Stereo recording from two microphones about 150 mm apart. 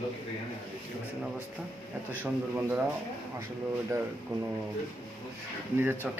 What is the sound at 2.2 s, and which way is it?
Speech, 10° right (ahead or behind).